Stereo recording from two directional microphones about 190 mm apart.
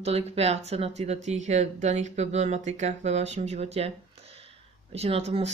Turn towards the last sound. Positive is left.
turn(degrees=-35)  # may be behind; listen again after turning